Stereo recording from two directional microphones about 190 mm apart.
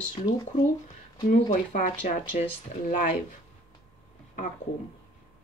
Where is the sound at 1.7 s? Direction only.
40° left (ahead or behind).